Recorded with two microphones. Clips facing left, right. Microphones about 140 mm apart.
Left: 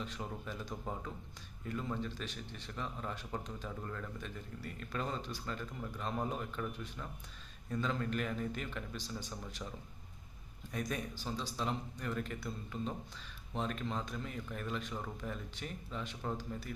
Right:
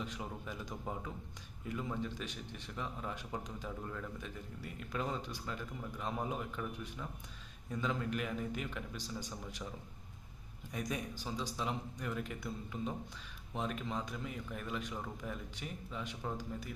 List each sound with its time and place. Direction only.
0.0 s speech: 10° right (ahead or behind)
10.7 s speech: 10° right (ahead or behind)